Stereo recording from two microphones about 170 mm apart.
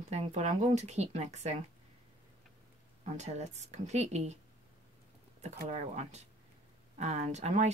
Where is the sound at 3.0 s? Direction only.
40° right (ahead or behind).